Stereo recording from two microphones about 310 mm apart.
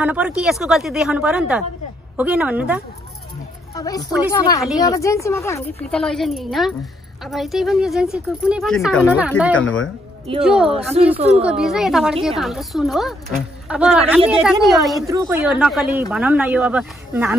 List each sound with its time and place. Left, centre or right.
0.0 s speech: centre
3.7 s a woman's voice: centre
11.1 s a woman's voice: centre
11.4 s speech: centre
15.0 s speech: centre